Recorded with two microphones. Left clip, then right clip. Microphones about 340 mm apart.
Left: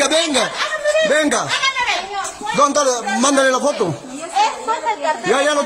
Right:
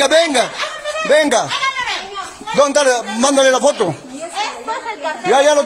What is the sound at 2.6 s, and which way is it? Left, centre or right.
A man's voice, centre.